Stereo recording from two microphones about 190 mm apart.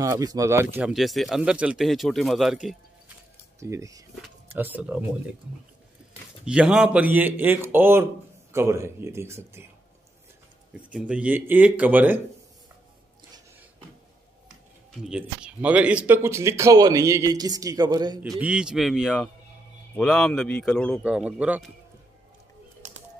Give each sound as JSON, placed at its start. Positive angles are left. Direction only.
{"t": 0.0, "sound": "speech", "side_deg": -20}
{"t": 3.5, "sound": "speech", "side_deg": -15}
{"t": 6.4, "sound": "speech", "side_deg": -5}
{"t": 10.7, "sound": "speech", "side_deg": -5}
{"t": 14.9, "sound": "speech", "side_deg": -5}
{"t": 18.4, "sound": "speech", "side_deg": -5}
{"t": 21.0, "sound": "speech", "side_deg": -5}
{"t": 22.8, "sound": "a sound", "side_deg": -40}